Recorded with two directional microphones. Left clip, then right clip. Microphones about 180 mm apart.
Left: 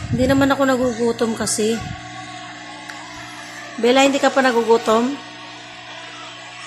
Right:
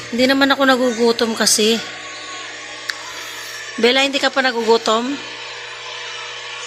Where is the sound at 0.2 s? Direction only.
5° right (ahead or behind).